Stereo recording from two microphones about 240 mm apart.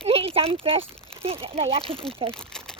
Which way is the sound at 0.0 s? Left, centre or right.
Right.